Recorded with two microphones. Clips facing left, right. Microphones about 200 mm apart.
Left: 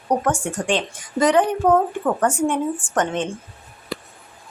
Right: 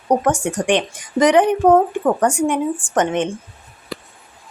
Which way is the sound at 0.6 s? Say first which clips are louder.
Right 4 dB; 15° right (ahead or behind).